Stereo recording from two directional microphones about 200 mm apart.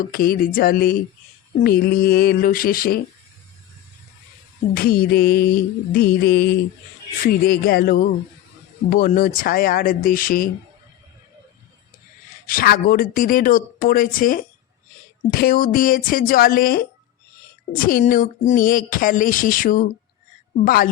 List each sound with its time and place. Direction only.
0.0 s speech: 45° left (ahead or behind)
4.7 s speech: 50° left (ahead or behind)
12.5 s speech: 45° left (ahead or behind)